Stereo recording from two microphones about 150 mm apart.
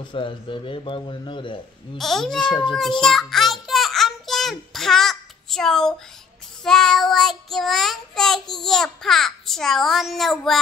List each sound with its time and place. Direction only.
0.1 s speech: 35° left (ahead or behind)
2.0 s child singing: centre (ahead or behind)
2.4 s speech: 30° left (ahead or behind)
3.0 s a sound: centre (ahead or behind)
6.6 s child singing: 5° left (ahead or behind)